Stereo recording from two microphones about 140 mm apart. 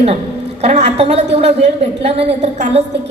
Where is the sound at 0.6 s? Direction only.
45° right (ahead or behind).